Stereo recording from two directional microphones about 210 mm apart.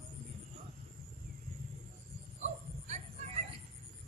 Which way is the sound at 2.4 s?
35° right (ahead or behind).